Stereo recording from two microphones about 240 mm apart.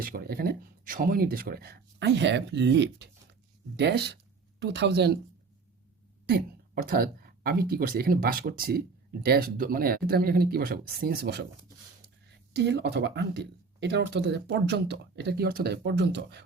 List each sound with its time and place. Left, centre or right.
0.0 s speech: right
6.8 s speech: right
12.5 s speech: right